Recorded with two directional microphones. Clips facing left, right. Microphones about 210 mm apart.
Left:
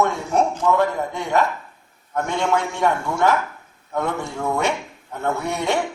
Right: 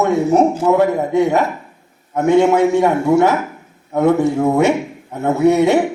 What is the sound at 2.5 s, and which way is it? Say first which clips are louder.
Speech: right 8 dB; 5° right (ahead or behind).